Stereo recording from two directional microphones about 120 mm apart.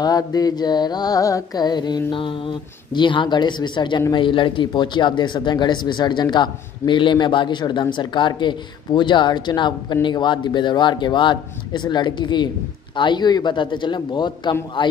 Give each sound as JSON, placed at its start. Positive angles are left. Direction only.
{"t": 0.0, "sound": "speech", "side_deg": 30}